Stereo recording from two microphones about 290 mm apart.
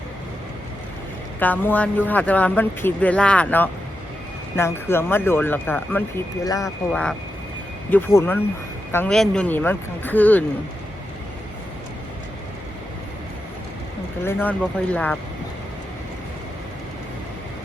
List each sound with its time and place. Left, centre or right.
1.4 s speech: centre
14.3 s speech: centre